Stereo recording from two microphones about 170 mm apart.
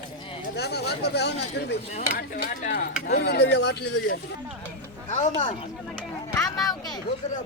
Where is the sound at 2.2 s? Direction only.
60° left (ahead or behind).